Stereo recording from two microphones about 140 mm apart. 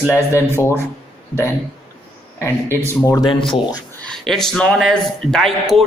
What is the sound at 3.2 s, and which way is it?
Speech, 40° left (ahead or behind).